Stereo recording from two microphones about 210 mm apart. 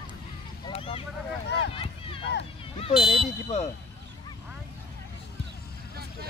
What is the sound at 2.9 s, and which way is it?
Speech, centre (ahead or behind).